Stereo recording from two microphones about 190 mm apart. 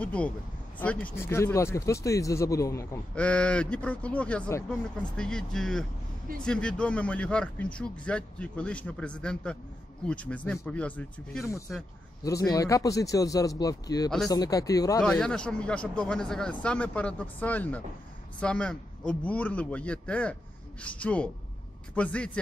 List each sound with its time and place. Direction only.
0.0 s a man's voice: 5° left (ahead or behind)
15.0 s a man's voice: 5° left (ahead or behind)